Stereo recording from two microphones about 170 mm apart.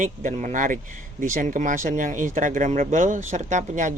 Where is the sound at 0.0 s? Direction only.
50° right (ahead or behind).